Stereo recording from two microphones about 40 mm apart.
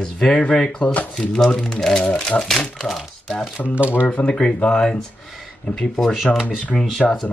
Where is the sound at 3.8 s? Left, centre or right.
Right.